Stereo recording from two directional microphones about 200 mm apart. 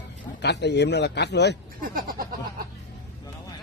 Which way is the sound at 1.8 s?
45° right (ahead or behind).